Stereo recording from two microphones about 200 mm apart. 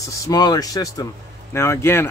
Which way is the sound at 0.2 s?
20° left (ahead or behind).